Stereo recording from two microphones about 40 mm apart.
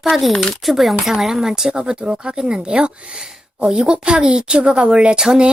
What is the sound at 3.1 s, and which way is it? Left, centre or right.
Speech, centre.